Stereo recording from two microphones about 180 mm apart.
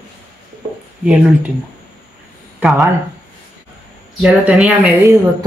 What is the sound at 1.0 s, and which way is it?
Speech, 5° right (ahead or behind).